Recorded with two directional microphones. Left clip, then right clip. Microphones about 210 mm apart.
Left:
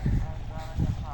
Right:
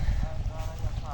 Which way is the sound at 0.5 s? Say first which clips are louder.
Left 3 dB; 55° right (ahead or behind).